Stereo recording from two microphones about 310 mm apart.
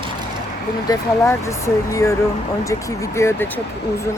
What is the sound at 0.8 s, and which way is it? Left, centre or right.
Speech, centre.